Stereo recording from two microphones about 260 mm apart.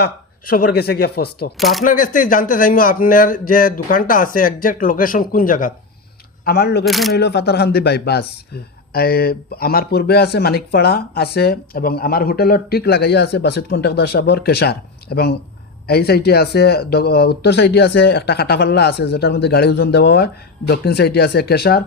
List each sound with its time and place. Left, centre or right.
0.0 s speech: left
1.5 s speech: centre
1.8 s speech: left
6.8 s speech: centre
7.2 s speech: left